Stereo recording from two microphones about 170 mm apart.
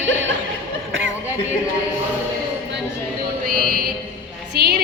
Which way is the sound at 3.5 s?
60° right (ahead or behind).